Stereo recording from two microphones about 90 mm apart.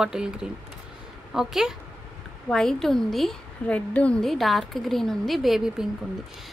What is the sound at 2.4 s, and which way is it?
Speech, 5° left (ahead or behind).